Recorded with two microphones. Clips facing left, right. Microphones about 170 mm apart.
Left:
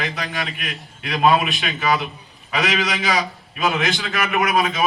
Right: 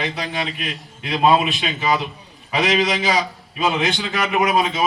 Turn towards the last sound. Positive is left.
turn(degrees=-25)  # may be behind; listen again after turning